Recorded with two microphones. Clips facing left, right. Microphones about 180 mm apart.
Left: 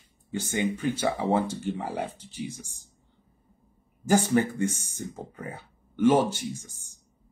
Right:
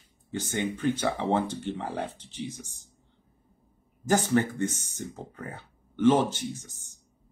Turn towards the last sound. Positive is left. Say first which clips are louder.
# left 3 dB
turn(degrees=10)  # may be behind; listen again after turning